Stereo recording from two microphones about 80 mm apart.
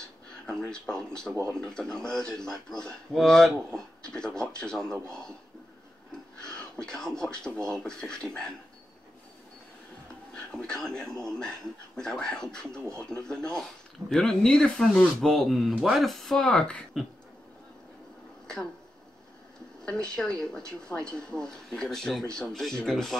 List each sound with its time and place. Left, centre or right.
0.5 s speech: centre
1.3 s speech: right
1.6 s speech: centre
6.8 s speech: centre
10.3 s speech: centre
19.8 s speech: centre